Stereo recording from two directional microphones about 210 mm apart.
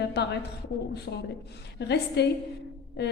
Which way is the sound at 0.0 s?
50° left (ahead or behind).